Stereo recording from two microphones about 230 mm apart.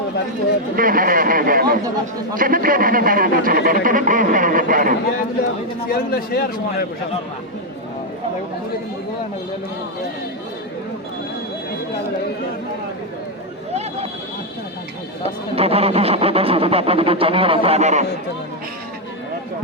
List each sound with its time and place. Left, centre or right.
0.8 s a man's voice: right
5.9 s speech: left
15.2 s speech: right